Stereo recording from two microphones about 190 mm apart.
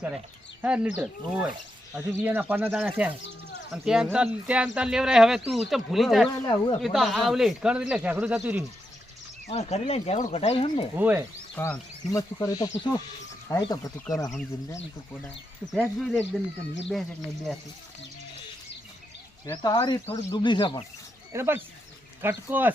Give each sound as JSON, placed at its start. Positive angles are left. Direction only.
{"t": 0.6, "sound": "speech", "side_deg": -5}
{"t": 6.4, "sound": "speech", "side_deg": 20}
{"t": 6.8, "sound": "speech", "side_deg": 0}
{"t": 9.5, "sound": "speech", "side_deg": 35}
{"t": 10.9, "sound": "speech", "side_deg": -10}
{"t": 11.5, "sound": "speech", "side_deg": 10}
{"t": 15.7, "sound": "speech", "side_deg": 5}
{"t": 19.5, "sound": "speech", "side_deg": 20}
{"t": 21.3, "sound": "speech", "side_deg": -10}